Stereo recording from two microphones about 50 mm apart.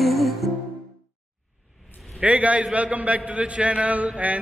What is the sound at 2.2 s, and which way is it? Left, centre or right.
A man's voice, right.